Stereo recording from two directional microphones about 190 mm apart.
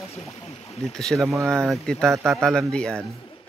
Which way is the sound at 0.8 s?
Centre (ahead or behind).